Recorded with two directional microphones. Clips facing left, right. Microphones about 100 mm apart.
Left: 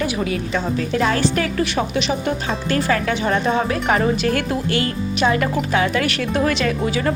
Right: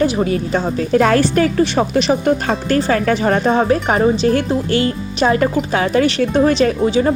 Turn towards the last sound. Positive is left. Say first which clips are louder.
# right 5 dB
turn(degrees=-25)  # may be behind; listen again after turning